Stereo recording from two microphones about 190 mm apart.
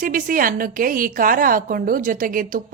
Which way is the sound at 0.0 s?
45° right (ahead or behind).